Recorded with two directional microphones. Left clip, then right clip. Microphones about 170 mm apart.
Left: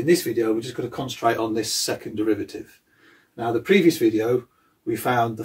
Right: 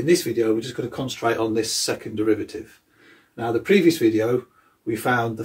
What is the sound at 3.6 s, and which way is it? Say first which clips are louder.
Speech: even; 20° left (ahead or behind).